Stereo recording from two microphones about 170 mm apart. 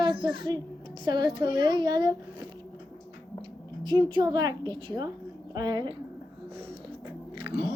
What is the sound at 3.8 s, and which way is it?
A child's voice, 25° right (ahead or behind).